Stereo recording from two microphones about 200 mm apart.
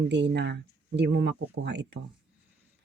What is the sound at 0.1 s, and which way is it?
Speech, 60° right (ahead or behind).